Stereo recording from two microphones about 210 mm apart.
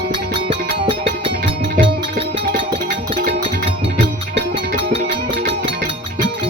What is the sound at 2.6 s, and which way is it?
Music, 25° right (ahead or behind).